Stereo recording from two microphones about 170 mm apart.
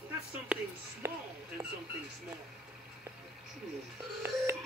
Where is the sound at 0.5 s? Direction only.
5° right (ahead or behind).